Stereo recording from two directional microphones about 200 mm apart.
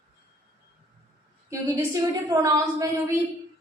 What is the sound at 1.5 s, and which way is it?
A woman's voice, 15° right (ahead or behind).